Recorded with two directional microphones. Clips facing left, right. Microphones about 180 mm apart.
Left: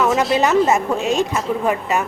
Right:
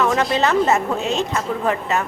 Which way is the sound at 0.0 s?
Centre (ahead or behind).